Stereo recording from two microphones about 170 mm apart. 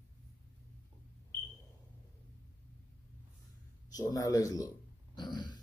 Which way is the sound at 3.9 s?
20° left (ahead or behind).